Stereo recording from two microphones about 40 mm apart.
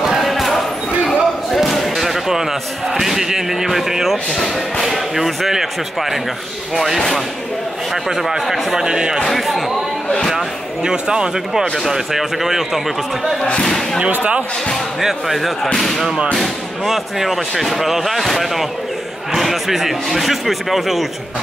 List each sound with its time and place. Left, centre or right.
0.0 s basketball bounce: centre
0.3 s basketball bounce: centre
1.7 s speech: centre
4.3 s speech: centre
4.8 s speech: centre
8.2 s speech: centre
8.8 s speech: centre
9.2 s speech: centre
10.3 s speech: centre
11.7 s speech: centre
15.0 s speech: centre